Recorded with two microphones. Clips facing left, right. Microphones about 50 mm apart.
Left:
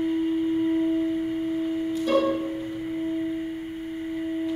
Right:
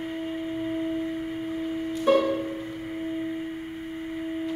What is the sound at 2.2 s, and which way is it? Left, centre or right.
Music, centre.